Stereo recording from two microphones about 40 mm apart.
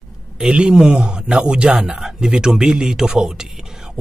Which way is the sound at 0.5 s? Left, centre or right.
Right.